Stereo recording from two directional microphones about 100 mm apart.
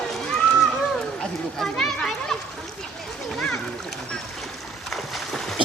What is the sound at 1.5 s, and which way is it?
Children playing, 5° left (ahead or behind).